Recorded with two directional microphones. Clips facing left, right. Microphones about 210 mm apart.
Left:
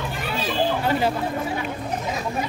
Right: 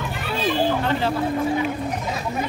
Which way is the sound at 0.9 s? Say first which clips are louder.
Left 1 dB; 10° left (ahead or behind).